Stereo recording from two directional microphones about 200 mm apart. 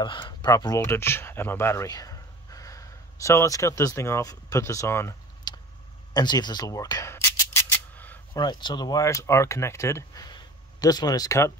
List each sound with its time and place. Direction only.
0.0 s speech: 25° left (ahead or behind)
6.1 s a sound: 20° left (ahead or behind)
8.4 s speech: 20° left (ahead or behind)